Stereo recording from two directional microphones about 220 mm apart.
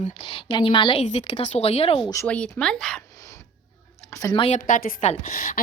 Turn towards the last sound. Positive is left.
turn(degrees=35)  # may be behind; listen again after turning